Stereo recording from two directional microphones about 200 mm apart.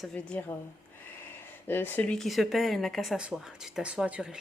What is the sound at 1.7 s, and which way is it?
Speech, 10° left (ahead or behind).